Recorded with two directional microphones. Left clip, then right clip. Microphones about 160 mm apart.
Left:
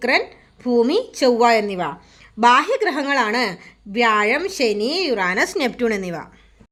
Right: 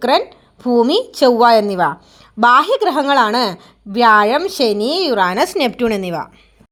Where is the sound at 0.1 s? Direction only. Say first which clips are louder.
Right 3 dB; 20° right (ahead or behind).